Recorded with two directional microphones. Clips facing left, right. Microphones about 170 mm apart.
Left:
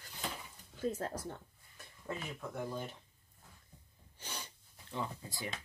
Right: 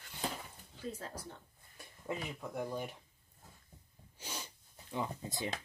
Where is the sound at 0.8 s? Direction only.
50° left (ahead or behind).